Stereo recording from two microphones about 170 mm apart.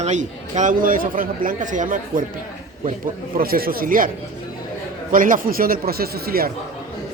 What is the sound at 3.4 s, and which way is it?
Speech, 60° right (ahead or behind).